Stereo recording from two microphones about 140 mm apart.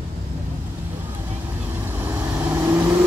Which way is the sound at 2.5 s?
15° right (ahead or behind).